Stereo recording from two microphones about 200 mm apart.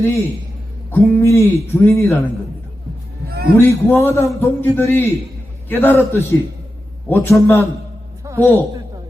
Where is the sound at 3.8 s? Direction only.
10° left (ahead or behind).